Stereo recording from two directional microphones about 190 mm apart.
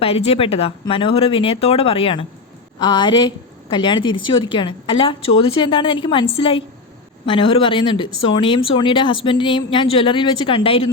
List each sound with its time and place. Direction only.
0.0 s speech: 30° left (ahead or behind)